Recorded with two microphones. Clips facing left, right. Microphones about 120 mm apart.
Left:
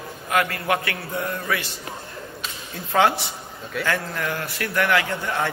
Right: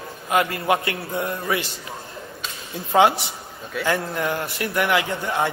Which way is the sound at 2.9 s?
20° right (ahead or behind).